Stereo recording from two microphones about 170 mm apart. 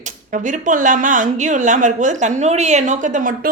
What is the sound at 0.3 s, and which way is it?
A woman's voice, 50° right (ahead or behind).